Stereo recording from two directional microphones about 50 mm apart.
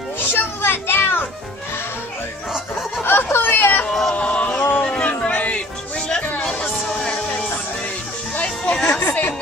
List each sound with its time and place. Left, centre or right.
0.3 s children playing: left
3.0 s chatter: left
4.1 s music: left
4.8 s a sound: left
7.0 s music: left
8.7 s music: centre